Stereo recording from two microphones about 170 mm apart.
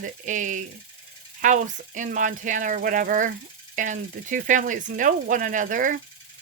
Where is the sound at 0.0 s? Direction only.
45° right (ahead or behind).